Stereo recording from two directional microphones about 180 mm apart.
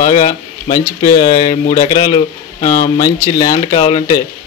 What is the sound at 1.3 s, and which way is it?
Speech, 45° left (ahead or behind).